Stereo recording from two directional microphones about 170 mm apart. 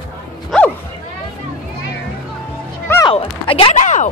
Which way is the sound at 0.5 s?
5° left (ahead or behind).